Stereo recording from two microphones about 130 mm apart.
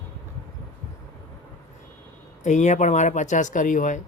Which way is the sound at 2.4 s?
65° left (ahead or behind).